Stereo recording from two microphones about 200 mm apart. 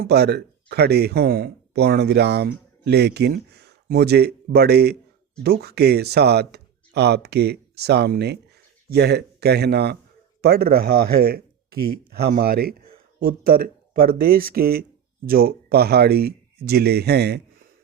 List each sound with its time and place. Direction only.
0.0 s speech: 55° right (ahead or behind)